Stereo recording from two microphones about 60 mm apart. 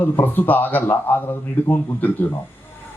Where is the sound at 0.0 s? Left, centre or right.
Left.